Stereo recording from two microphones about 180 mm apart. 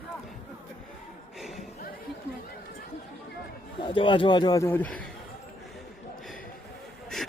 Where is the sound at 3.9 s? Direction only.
30° left (ahead or behind); by 5.1 s 5° left (ahead or behind).